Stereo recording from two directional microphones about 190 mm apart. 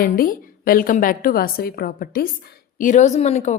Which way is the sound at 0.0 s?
45° left (ahead or behind).